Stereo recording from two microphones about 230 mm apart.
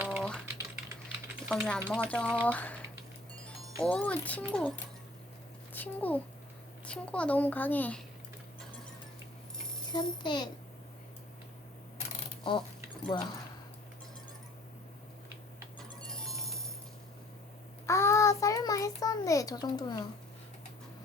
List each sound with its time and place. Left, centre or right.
0.0 s typing: centre
1.5 s a child's voice: centre
2.5 s speech: centre
3.8 s a child's voice: centre
5.7 s a child's voice: centre
9.9 s a child's voice: centre
11.9 s mechanisms: left
13.1 s a child's voice: centre
16.0 s music: centre
17.8 s child singing: centre